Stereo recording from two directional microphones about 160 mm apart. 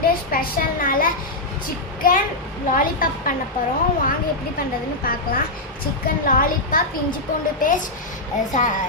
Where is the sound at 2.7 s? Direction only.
60° left (ahead or behind).